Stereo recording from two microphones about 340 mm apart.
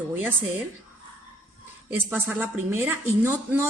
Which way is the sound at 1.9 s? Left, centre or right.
Centre.